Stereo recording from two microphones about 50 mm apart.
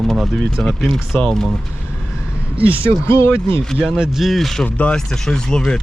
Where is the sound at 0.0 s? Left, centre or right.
Centre.